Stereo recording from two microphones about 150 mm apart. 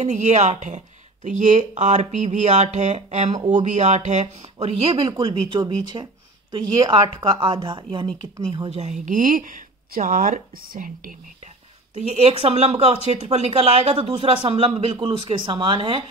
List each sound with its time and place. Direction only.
0.0 s speech: 50° right (ahead or behind)
5.2 s speech: 30° right (ahead or behind); by 11.1 s 65° right (ahead or behind)
12.1 s speech: 40° right (ahead or behind)